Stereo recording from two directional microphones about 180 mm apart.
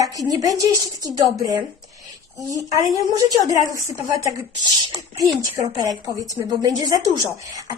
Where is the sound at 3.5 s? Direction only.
20° right (ahead or behind).